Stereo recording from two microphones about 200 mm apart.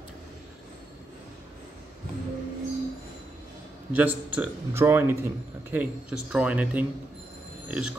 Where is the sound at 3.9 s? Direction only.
10° right (ahead or behind).